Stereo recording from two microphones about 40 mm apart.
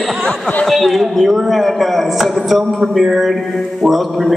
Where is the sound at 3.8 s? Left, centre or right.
Centre.